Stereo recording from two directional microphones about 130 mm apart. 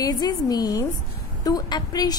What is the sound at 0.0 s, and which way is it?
A woman's voice, 30° left (ahead or behind).